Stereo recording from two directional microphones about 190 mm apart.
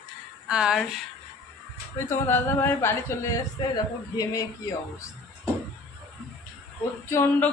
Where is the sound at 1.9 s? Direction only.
10° left (ahead or behind).